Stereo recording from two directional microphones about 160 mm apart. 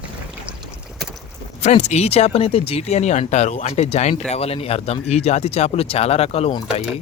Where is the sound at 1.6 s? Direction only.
45° left (ahead or behind).